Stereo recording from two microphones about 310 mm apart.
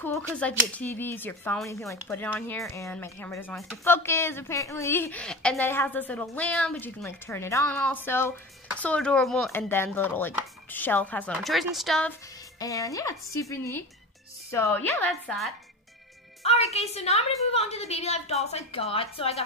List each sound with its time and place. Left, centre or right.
0.0 s speech: centre
12.5 s speech: centre
16.4 s a woman's voice: centre